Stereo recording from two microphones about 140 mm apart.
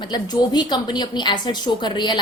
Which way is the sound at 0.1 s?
30° left (ahead or behind).